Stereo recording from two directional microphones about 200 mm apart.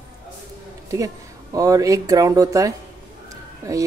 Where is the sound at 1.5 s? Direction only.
15° right (ahead or behind).